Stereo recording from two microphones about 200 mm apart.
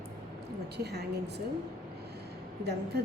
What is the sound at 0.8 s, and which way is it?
Speech, 55° right (ahead or behind).